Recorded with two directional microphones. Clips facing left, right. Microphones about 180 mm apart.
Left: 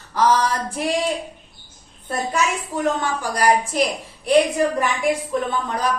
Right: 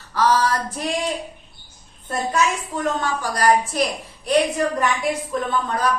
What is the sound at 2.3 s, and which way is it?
A woman's voice, 10° left (ahead or behind).